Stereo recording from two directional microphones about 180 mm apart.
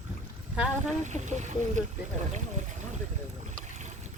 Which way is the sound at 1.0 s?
40° right (ahead or behind).